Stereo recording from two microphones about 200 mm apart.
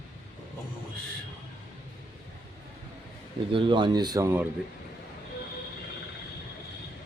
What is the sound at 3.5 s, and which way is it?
Speech, 25° right (ahead or behind).